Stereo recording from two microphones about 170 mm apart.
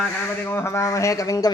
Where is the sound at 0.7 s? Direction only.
20° left (ahead or behind).